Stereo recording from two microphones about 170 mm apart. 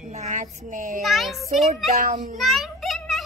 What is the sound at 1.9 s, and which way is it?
Speech, 50° right (ahead or behind).